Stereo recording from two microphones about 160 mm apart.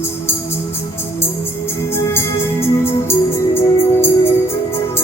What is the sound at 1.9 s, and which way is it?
Music, 15° left (ahead or behind).